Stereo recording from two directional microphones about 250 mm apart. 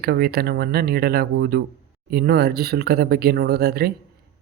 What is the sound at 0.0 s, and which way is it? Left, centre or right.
Speech, right.